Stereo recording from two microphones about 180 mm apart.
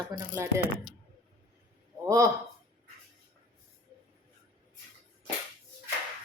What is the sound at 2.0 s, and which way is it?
Speech, 15° right (ahead or behind).